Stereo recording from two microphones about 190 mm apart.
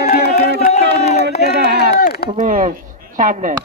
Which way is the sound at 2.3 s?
40° right (ahead or behind).